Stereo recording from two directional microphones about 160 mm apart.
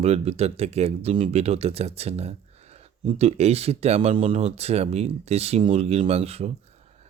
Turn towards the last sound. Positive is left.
turn(degrees=-40)  # may be behind; listen again after turning